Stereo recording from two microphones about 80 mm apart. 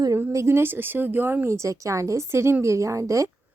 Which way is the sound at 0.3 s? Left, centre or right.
Right.